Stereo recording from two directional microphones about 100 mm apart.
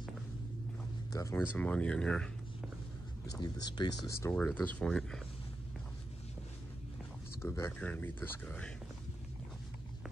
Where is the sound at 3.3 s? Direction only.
45° left (ahead or behind).